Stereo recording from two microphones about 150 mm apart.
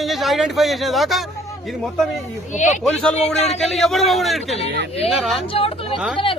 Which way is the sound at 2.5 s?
55° left (ahead or behind).